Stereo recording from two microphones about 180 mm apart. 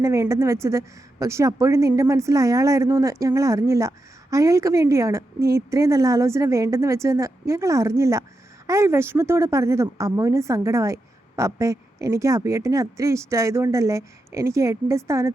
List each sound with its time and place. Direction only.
0.0 s a woman's voice: 15° right (ahead or behind)